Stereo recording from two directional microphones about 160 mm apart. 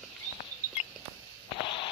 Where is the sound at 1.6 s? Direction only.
30° left (ahead or behind).